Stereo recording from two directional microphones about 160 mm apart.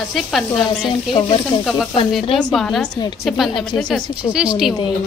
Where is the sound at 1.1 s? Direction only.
30° left (ahead or behind).